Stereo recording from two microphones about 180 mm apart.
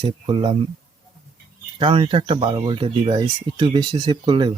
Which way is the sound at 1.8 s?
30° right (ahead or behind).